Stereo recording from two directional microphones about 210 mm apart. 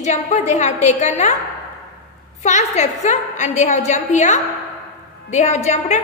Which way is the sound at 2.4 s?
35° left (ahead or behind).